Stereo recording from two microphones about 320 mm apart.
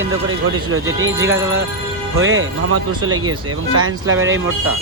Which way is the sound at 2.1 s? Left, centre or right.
Right.